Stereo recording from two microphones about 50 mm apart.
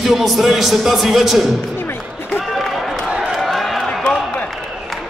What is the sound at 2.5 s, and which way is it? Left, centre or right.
Run, centre.